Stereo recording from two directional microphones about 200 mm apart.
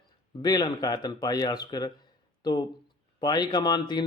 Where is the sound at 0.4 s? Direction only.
20° left (ahead or behind).